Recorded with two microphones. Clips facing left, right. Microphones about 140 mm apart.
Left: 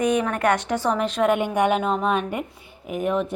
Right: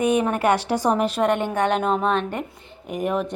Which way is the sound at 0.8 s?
10° right (ahead or behind).